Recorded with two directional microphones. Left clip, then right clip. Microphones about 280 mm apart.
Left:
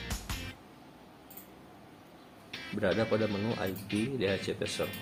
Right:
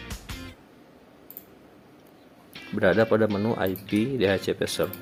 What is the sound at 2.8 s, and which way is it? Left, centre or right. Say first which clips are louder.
Speech: right 9 dB; right.